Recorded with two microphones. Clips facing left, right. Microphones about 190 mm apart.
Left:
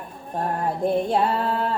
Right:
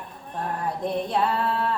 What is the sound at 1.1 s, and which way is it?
Female singing, 30° left (ahead or behind).